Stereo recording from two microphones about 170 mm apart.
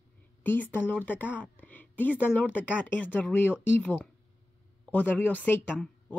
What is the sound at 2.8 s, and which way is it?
Speech, 10° left (ahead or behind).